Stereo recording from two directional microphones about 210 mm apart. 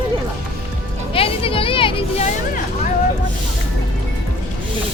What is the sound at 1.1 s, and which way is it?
Speech, 25° left (ahead or behind).